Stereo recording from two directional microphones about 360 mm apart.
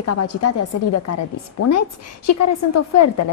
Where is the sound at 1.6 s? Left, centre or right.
Left.